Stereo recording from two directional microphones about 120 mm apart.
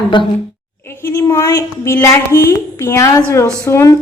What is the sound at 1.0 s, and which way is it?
A woman's voice, 20° left (ahead or behind).